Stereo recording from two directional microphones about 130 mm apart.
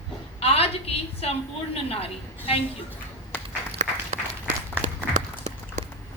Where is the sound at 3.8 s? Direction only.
60° right (ahead or behind).